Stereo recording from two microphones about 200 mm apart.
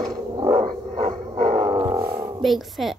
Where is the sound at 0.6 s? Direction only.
40° right (ahead or behind).